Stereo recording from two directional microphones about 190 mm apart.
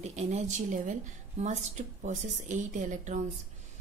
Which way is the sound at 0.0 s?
35° right (ahead or behind).